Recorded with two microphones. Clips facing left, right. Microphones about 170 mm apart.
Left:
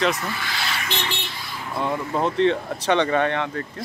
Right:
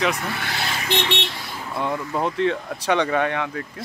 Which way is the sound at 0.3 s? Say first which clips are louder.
Right 1 dB; 60° right (ahead or behind).